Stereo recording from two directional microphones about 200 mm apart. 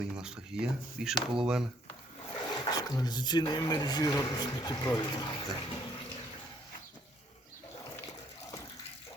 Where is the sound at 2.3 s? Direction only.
20° left (ahead or behind).